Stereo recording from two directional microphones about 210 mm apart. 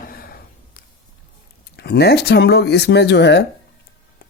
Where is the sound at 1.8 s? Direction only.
50° left (ahead or behind).